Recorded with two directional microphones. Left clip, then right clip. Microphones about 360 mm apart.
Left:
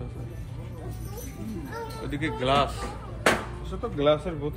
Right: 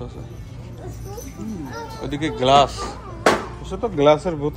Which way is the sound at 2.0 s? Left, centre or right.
Centre.